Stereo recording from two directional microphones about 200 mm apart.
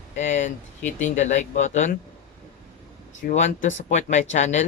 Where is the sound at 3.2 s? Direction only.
35° left (ahead or behind).